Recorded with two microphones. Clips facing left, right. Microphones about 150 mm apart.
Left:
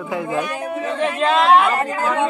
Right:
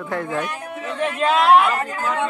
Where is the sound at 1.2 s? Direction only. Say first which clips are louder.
Even; 5° right (ahead or behind).